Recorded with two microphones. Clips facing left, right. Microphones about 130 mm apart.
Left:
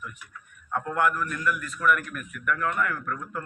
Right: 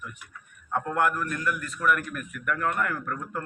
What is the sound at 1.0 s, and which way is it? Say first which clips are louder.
A man's voice: left 1 dB; 40° right (ahead or behind).